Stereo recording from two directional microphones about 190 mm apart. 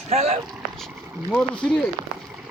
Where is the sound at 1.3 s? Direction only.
5° left (ahead or behind).